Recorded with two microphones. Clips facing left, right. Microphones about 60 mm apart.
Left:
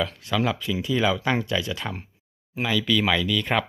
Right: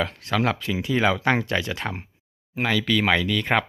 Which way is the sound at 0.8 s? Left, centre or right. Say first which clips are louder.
Right 1 dB; right.